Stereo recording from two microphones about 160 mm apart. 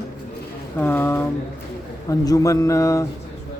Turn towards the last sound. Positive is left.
turn(degrees=20)  # may be behind; listen again after turning